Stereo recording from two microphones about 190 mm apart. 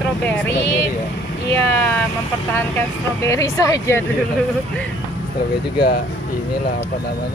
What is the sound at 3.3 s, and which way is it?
Speech, 15° left (ahead or behind).